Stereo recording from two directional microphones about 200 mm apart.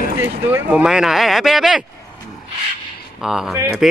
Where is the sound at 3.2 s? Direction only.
Centre (ahead or behind).